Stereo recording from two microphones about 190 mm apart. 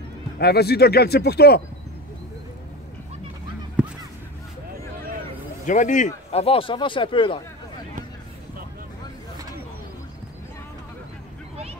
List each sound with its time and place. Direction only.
0.4 s speech: 55° left (ahead or behind)
3.8 s honk: 5° right (ahead or behind)
5.7 s speech: 40° left (ahead or behind)